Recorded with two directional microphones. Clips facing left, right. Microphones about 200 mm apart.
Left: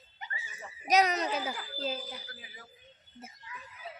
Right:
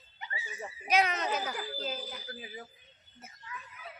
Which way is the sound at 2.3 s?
25° right (ahead or behind).